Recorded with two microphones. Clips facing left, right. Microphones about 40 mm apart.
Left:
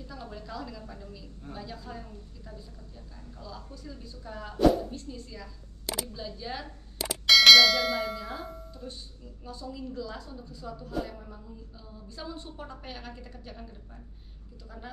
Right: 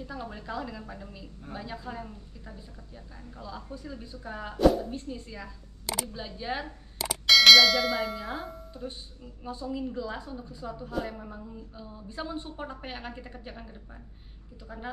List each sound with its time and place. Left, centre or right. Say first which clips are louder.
0.0 s a woman's voice: right 4 dB; right
7.0 s clang: even; centre
8.7 s a woman's voice: right 3 dB; right